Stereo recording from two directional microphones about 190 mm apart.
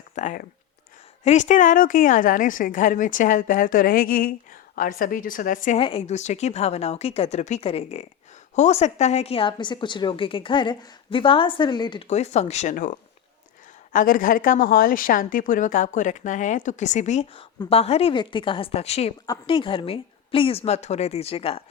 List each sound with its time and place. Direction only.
0.2 s a woman's voice: 40° left (ahead or behind)
5.8 s a woman's voice: 30° left (ahead or behind)
19.2 s a woman's voice: 25° left (ahead or behind)